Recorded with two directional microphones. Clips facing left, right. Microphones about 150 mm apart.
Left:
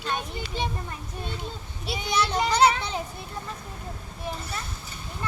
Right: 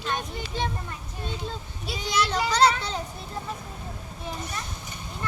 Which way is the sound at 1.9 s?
15° left (ahead or behind).